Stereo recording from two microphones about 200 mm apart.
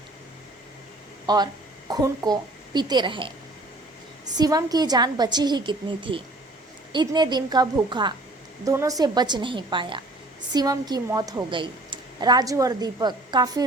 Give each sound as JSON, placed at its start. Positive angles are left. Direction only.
{"t": 1.3, "sound": "a woman's voice", "side_deg": -20}
{"t": 4.4, "sound": "a woman's voice", "side_deg": -20}